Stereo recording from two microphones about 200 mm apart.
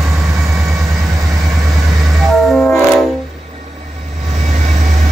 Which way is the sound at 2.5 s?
5° left (ahead or behind).